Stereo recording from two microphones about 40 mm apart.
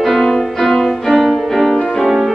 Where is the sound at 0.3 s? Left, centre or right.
Centre.